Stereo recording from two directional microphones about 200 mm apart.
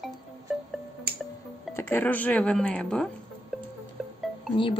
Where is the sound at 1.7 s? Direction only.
10° left (ahead or behind).